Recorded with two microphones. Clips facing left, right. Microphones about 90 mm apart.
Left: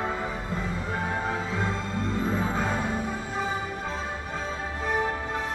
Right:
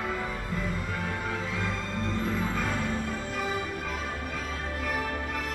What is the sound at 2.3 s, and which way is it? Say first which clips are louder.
Music: left 3 dB; 30° left (ahead or behind).